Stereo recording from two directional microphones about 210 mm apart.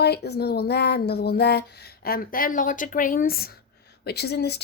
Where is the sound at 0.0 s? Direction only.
50° left (ahead or behind).